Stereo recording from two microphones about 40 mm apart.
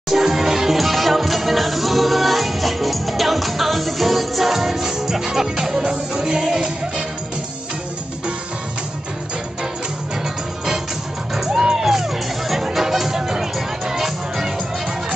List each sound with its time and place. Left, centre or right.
0.1 s music: centre
11.3 s music: centre